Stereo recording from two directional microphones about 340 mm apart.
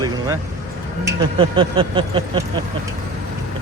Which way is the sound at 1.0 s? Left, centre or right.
Centre.